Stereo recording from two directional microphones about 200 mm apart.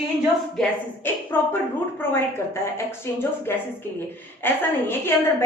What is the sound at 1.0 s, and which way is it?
A woman's voice, 10° left (ahead or behind).